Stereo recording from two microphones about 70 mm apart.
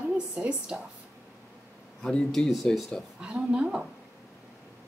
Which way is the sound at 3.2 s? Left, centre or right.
Centre.